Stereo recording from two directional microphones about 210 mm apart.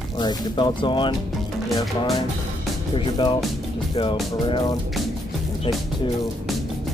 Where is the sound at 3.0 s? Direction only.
25° left (ahead or behind).